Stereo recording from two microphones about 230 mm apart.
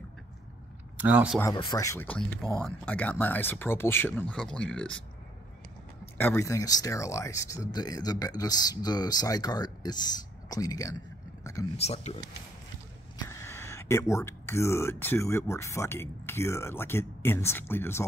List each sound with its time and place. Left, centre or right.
0.9 s speech: centre
1.4 s speech: centre
6.1 s speech: centre
11.7 s speech: left
13.3 s speech: centre